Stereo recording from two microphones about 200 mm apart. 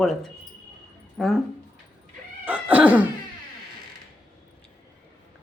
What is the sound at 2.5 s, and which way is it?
Cat, 5° right (ahead or behind).